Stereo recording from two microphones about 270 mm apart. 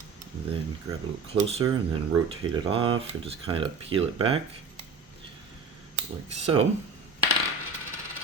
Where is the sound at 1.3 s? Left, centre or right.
Right.